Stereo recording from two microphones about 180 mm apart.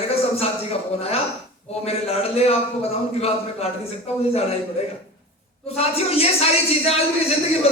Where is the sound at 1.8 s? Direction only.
35° left (ahead or behind).